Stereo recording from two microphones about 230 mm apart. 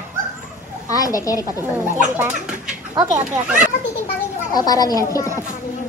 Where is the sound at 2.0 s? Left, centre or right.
Centre.